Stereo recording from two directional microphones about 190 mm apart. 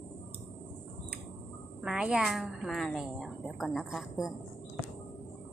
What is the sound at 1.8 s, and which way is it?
A woman's voice, 5° right (ahead or behind).